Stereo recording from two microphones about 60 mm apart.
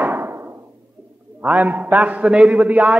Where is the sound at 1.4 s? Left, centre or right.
Right.